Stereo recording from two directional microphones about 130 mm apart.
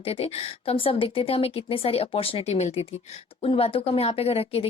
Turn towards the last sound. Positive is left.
turn(degrees=50)  # may be behind; listen again after turning